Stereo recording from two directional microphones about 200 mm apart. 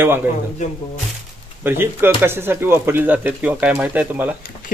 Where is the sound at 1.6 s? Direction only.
10° right (ahead or behind).